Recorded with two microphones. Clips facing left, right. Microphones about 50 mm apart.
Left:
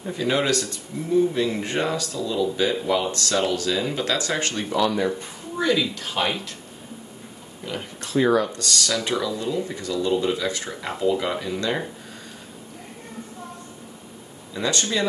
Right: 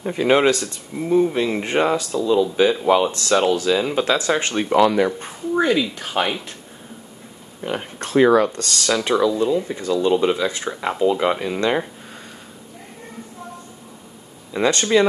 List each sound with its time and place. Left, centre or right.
0.1 s speech: right
0.5 s speech: right
4.6 s speech: right
5.2 s speech: right
7.6 s speech: right
8.2 s speech: right
8.5 s speech: right
14.5 s speech: right